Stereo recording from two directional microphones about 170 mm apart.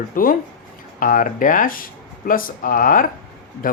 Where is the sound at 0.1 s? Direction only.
55° left (ahead or behind).